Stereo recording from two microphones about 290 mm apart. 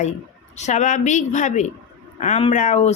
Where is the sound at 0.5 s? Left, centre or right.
Left.